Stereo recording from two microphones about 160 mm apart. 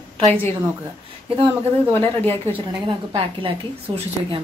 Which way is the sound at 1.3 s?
35° right (ahead or behind).